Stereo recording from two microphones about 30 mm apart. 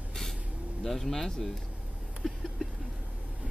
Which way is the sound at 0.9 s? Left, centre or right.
Centre.